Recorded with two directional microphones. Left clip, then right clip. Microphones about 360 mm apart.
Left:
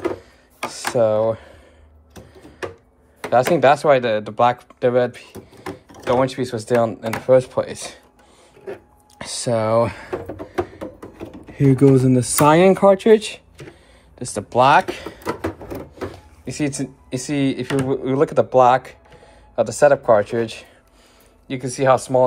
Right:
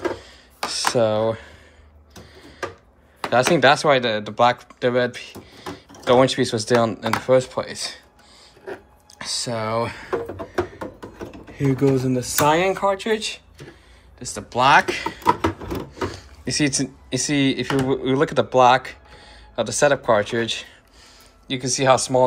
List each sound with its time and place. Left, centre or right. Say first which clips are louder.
0.7 s a sound: left 1 dB; centre
3.3 s speech: left 1 dB; centre
9.2 s speech: left 5 dB; centre
11.5 s speech: left 5 dB; centre
16.4 s speech: right 3 dB; centre